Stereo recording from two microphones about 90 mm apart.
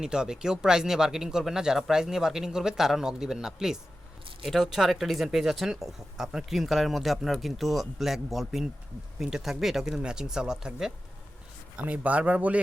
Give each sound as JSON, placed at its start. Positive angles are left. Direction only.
{"t": 0.0, "sound": "speech", "side_deg": -10}